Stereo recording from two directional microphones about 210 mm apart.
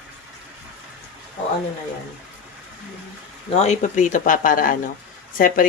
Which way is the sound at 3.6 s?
35° left (ahead or behind).